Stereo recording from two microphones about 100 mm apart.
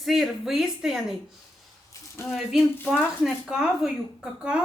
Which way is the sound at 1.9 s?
25° left (ahead or behind).